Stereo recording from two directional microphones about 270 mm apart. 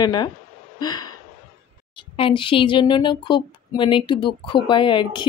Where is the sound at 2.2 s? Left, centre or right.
Centre.